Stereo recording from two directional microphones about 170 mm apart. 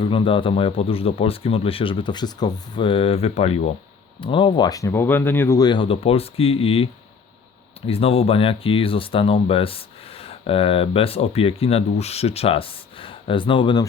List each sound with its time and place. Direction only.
0.0 s speech: 30° left (ahead or behind)
7.9 s speech: 35° left (ahead or behind)